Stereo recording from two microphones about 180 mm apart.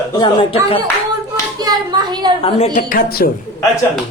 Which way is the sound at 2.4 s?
30° left (ahead or behind).